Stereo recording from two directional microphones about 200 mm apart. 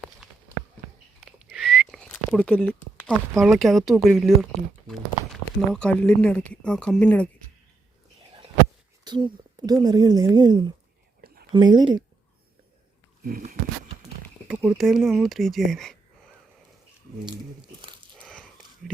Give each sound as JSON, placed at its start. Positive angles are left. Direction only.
{"t": 1.2, "sound": "whistling", "side_deg": 0}
{"t": 3.0, "sound": "speech", "side_deg": 0}
{"t": 9.0, "sound": "a woman's voice", "side_deg": -20}
{"t": 13.2, "sound": "a sound", "side_deg": -45}
{"t": 14.4, "sound": "speech", "side_deg": -5}
{"t": 18.2, "sound": "a sound", "side_deg": 5}